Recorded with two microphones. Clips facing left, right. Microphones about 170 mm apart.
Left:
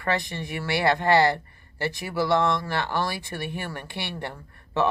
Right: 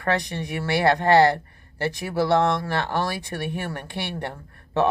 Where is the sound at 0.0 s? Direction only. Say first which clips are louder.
Right 3 dB; 45° right (ahead or behind).